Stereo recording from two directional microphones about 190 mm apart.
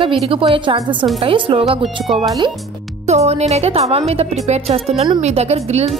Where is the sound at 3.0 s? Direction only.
35° right (ahead or behind).